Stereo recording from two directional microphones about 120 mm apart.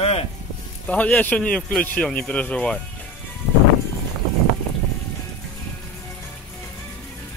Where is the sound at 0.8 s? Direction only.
10° left (ahead or behind).